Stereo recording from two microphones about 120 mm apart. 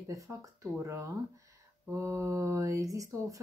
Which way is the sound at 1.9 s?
20° right (ahead or behind).